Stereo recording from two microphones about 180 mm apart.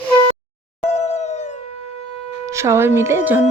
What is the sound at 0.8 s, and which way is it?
Howl, 35° left (ahead or behind).